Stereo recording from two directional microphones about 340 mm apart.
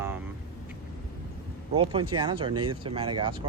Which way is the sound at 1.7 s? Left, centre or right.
Centre.